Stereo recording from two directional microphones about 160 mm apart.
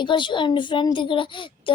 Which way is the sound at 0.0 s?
30° left (ahead or behind).